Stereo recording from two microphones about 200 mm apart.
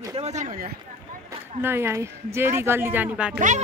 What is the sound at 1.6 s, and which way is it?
Speech, 10° right (ahead or behind).